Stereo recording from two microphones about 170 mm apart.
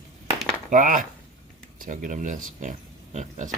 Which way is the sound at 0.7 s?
50° right (ahead or behind).